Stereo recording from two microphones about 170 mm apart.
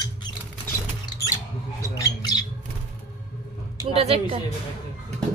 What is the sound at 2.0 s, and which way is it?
Squawk, 25° left (ahead or behind).